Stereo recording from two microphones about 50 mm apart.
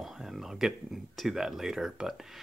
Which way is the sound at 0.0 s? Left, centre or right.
Centre.